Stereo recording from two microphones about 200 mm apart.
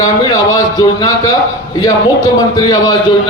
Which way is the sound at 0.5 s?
20° left (ahead or behind).